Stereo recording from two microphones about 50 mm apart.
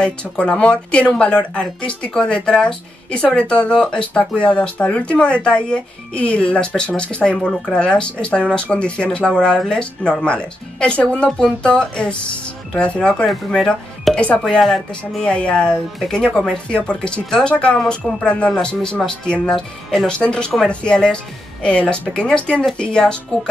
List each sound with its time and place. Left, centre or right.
0.0 s speech: left
14.1 s speech: left
14.6 s speech: centre
15.2 s speech: left